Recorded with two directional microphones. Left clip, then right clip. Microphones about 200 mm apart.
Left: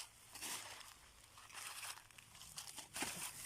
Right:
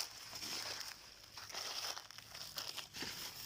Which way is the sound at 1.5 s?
45° right (ahead or behind).